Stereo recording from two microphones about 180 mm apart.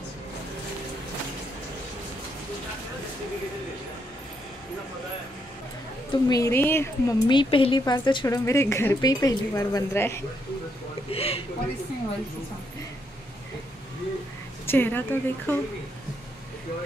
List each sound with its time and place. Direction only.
6.2 s a woman's voice: 20° left (ahead or behind)
7.2 s a woman's voice: 25° left (ahead or behind)
11.1 s speech: 35° left (ahead or behind)
14.7 s a woman's voice: 10° left (ahead or behind)